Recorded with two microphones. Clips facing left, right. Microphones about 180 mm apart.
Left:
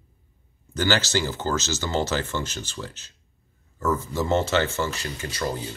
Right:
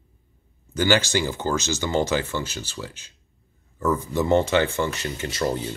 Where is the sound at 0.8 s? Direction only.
15° right (ahead or behind).